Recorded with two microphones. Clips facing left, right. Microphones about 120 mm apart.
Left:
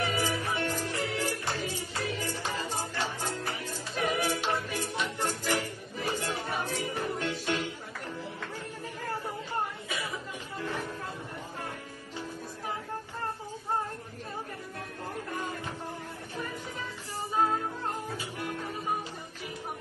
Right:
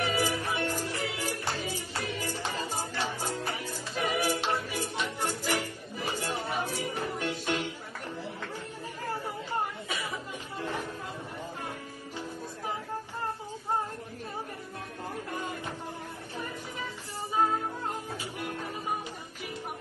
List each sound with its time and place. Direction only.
0.0 s music: 15° right (ahead or behind)
6.1 s a sound: 15° right (ahead or behind)
6.6 s music: 15° right (ahead or behind)